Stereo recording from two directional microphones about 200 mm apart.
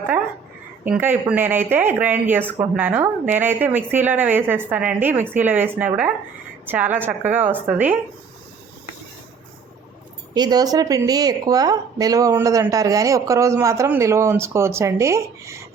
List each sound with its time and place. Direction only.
0.9 s speech: 10° right (ahead or behind)
10.3 s speech: 20° right (ahead or behind)